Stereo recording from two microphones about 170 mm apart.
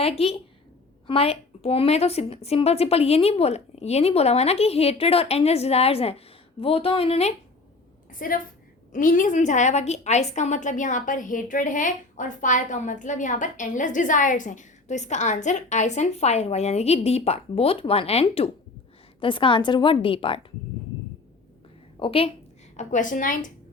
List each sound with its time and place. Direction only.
0.0 s a woman's voice: 35° left (ahead or behind)
8.2 s a woman's voice: 55° left (ahead or behind); by 20.4 s 30° left (ahead or behind)
21.9 s a woman's voice: 30° left (ahead or behind)
22.8 s a woman's voice: 45° left (ahead or behind)